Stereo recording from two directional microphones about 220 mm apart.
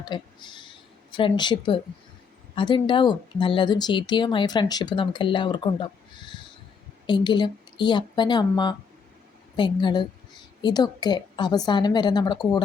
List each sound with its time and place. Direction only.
0.0 s a woman's voice: 20° left (ahead or behind)